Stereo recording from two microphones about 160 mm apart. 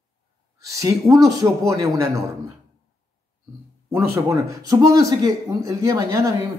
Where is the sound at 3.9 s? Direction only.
20° right (ahead or behind).